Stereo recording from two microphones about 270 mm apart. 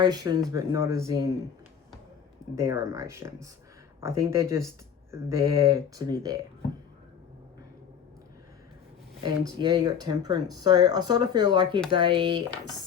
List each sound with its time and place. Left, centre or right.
0.0 s speech: centre
2.6 s speech: centre
9.2 s speech: centre